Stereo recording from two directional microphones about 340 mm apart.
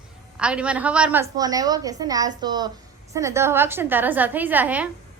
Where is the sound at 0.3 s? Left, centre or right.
Centre.